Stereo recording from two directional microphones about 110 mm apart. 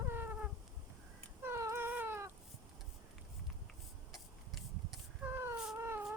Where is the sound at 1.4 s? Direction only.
25° right (ahead or behind).